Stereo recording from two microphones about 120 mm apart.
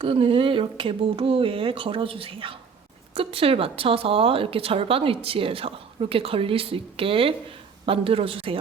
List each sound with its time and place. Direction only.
0.0 s a woman's voice: 50° right (ahead or behind)